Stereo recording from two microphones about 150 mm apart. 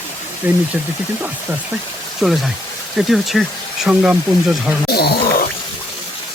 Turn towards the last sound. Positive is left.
turn(degrees=90)